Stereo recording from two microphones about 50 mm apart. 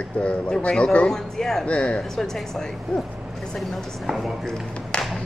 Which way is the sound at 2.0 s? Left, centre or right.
Centre.